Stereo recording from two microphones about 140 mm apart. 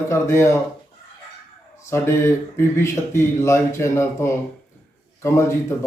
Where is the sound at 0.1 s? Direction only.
20° left (ahead or behind).